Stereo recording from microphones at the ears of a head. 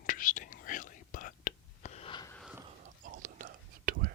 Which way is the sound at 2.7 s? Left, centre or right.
Right.